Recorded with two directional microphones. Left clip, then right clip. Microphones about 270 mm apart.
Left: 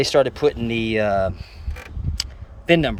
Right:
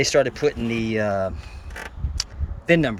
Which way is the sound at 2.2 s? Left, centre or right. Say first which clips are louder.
Left 1 dB; centre.